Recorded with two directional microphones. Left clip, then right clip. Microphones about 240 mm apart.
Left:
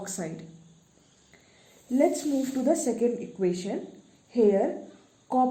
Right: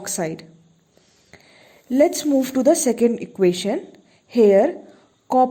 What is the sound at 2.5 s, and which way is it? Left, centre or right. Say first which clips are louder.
A woman's voice: right 9 dB; right.